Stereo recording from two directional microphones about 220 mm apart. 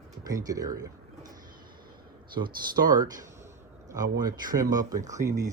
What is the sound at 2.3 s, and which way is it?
Speech, 20° right (ahead or behind).